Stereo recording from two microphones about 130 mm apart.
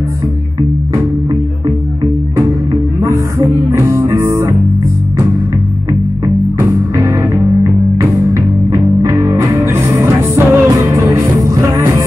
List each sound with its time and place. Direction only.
2.3 s music: 25° right (ahead or behind)
7.0 s music: 20° right (ahead or behind)